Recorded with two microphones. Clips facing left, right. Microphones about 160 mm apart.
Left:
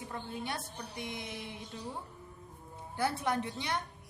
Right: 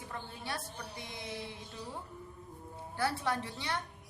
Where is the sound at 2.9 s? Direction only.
20° left (ahead or behind).